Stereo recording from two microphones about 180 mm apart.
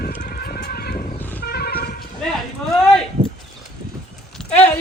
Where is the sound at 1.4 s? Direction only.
60° left (ahead or behind).